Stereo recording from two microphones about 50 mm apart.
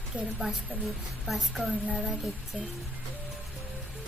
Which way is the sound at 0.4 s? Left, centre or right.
Centre.